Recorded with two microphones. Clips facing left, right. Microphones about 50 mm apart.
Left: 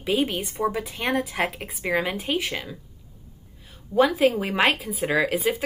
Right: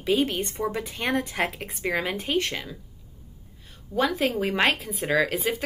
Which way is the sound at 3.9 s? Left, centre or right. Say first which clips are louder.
Left 5 dB; centre.